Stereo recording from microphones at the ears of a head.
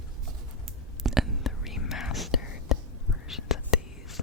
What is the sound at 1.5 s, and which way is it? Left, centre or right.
Whispering, left.